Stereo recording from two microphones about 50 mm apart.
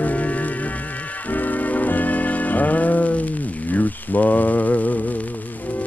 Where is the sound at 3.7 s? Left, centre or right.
Left.